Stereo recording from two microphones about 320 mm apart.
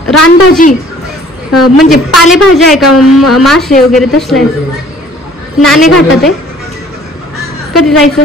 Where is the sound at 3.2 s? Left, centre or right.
Left.